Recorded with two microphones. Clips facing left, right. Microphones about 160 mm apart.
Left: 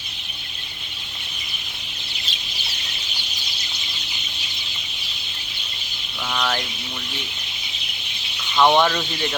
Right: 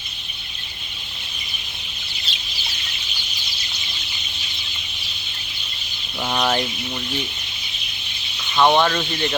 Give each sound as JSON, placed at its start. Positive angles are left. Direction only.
{"t": 6.2, "sound": "speech", "side_deg": -25}
{"t": 8.5, "sound": "speech", "side_deg": -5}